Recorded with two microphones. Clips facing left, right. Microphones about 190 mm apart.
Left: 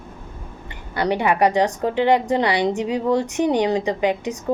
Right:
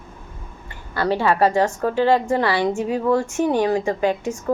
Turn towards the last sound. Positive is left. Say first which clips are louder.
# even
turn(degrees=20)  # may be behind; listen again after turning